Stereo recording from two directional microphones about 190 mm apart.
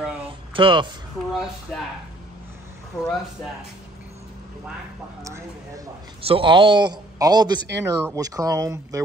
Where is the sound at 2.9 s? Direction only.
15° left (ahead or behind).